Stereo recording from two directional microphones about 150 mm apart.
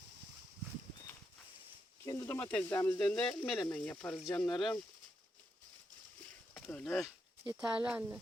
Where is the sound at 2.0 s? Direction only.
20° left (ahead or behind).